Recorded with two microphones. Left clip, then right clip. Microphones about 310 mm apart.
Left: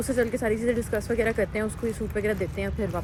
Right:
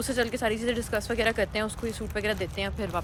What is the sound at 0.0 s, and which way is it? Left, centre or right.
Speech, centre.